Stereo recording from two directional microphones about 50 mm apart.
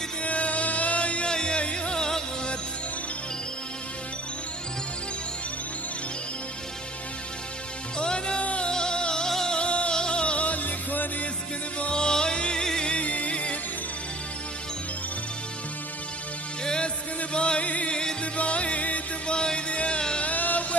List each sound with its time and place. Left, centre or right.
0.2 s music: left
8.0 s music: centre; by 11.2 s left
11.8 s music: centre
16.6 s music: centre
19.3 s a sound: centre